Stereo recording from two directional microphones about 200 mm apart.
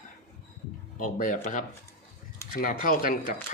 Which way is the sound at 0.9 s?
40° left (ahead or behind).